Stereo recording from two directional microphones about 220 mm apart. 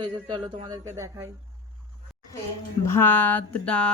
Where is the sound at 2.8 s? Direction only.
10° left (ahead or behind).